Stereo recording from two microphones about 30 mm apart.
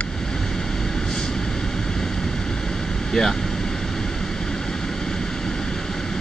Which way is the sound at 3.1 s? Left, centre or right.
Centre.